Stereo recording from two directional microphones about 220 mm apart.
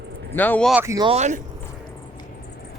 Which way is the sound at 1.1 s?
30° right (ahead or behind).